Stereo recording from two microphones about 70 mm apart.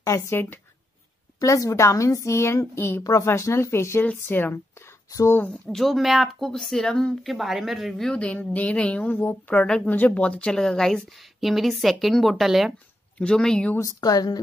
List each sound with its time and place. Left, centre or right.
0.0 s a woman's voice: left
1.4 s a woman's voice: left
3.0 s a woman's voice: left
4.0 s speech: left
5.7 s a woman's voice: centre
7.2 s a woman's voice: centre
8.1 s a woman's voice: centre
13.2 s speech: centre
13.7 s a woman's voice: left